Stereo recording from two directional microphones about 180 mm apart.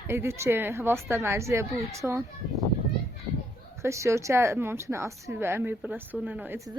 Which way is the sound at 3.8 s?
15° right (ahead or behind).